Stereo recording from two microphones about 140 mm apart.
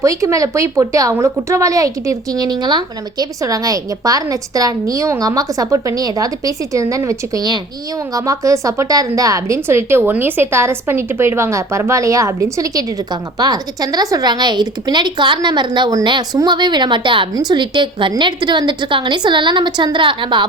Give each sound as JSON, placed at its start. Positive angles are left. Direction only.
{"t": 0.0, "sound": "a woman's voice", "side_deg": -20}